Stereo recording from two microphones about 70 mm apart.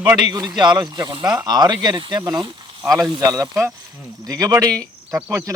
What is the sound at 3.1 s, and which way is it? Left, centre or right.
Speech, right.